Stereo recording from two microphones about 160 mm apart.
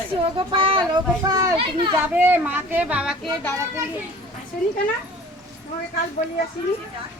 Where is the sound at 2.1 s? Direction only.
15° right (ahead or behind).